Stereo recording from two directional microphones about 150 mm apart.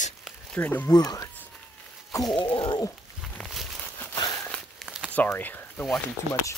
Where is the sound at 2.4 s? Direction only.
30° left (ahead or behind).